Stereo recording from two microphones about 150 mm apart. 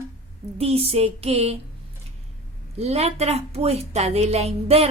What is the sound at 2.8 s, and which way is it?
A woman's voice, 45° right (ahead or behind).